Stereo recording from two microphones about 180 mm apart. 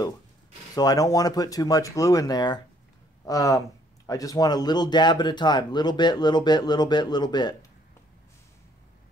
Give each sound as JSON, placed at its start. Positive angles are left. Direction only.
{"t": 0.7, "sound": "speech", "side_deg": 20}